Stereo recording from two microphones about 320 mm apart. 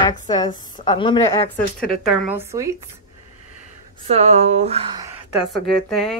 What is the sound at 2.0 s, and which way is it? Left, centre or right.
Speech, centre.